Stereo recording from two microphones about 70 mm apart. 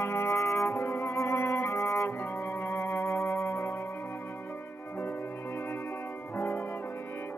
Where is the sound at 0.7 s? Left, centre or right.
Left.